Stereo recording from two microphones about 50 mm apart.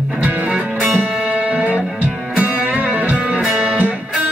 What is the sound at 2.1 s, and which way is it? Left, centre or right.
Music, centre.